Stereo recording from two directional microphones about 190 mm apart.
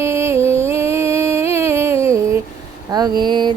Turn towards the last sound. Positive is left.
turn(degrees=-25)  # may be behind; listen again after turning